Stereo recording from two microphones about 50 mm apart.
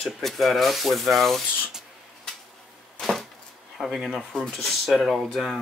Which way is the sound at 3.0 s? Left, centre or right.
Centre.